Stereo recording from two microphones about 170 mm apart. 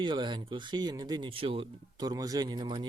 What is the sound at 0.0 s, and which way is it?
Speech, 25° right (ahead or behind).